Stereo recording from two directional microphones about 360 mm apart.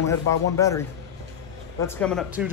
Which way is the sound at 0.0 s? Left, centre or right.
Centre.